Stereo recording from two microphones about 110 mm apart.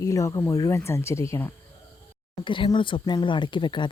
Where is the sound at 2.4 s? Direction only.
50° left (ahead or behind).